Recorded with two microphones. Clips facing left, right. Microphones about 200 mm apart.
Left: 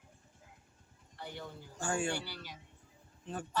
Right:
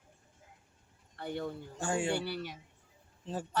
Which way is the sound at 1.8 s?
20° right (ahead or behind).